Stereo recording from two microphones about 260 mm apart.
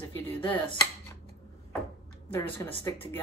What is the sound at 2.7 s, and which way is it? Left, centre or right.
Speech, centre.